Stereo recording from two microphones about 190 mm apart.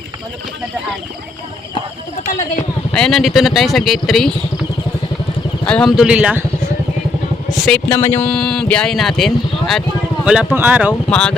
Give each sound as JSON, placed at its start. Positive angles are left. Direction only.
{"t": 2.2, "sound": "speech", "side_deg": 40}
{"t": 2.9, "sound": "speech", "side_deg": 0}
{"t": 5.6, "sound": "speech", "side_deg": 5}
{"t": 7.6, "sound": "speech", "side_deg": 5}
{"t": 11.1, "sound": "speech", "side_deg": 5}